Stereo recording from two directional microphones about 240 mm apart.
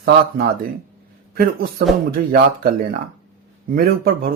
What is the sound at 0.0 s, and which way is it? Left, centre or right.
Speech, right.